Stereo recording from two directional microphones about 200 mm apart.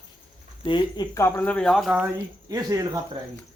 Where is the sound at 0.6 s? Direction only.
25° left (ahead or behind); by 3.0 s 15° right (ahead or behind).